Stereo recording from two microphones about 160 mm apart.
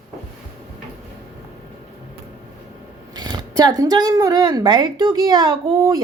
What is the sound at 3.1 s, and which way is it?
A woman's voice, 25° right (ahead or behind).